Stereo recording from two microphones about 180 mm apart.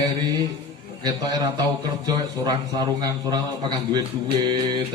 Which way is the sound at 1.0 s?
20° right (ahead or behind).